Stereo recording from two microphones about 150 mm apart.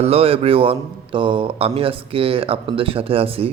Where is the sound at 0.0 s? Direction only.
40° right (ahead or behind).